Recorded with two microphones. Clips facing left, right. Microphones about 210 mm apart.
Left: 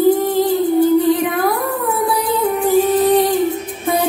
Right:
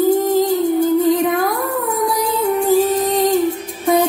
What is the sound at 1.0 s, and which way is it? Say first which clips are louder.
Music: even; 45° right (ahead or behind).